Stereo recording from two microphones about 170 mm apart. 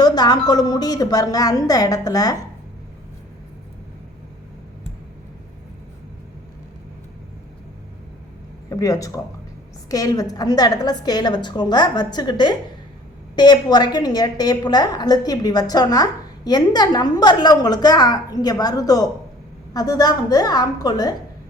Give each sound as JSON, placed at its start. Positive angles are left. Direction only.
{"t": 0.0, "sound": "a woman's voice", "side_deg": 25}
{"t": 8.7, "sound": "a woman's voice", "side_deg": 20}